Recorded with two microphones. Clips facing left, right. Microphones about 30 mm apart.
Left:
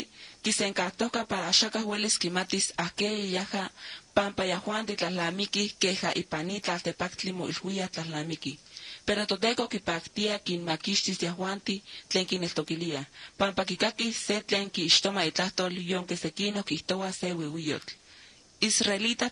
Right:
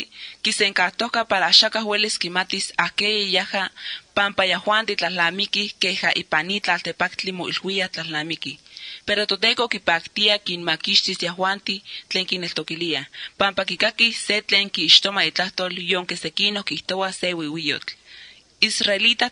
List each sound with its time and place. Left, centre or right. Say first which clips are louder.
0.0 s a woman's voice: right 8 dB; right
15.8 s a woman's voice: right 8 dB; right
18.6 s a woman's voice: right 8 dB; right